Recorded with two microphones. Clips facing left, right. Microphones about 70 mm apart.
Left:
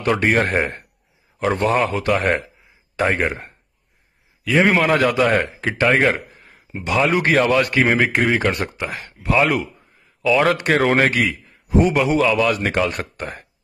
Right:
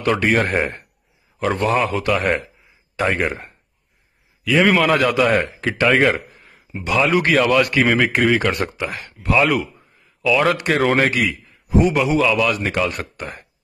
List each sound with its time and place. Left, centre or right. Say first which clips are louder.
0.0 s a man's voice: even; left
4.6 s a man's voice: right 1 dB; left